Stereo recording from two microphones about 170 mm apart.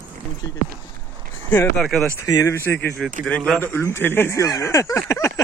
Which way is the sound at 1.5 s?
5° left (ahead or behind).